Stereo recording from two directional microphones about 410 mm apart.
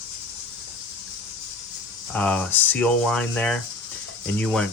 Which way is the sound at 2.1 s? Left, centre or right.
Centre.